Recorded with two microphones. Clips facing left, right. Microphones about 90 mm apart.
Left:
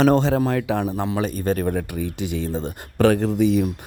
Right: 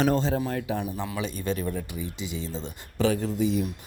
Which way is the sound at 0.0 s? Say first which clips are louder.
Left 7 dB; 80° left.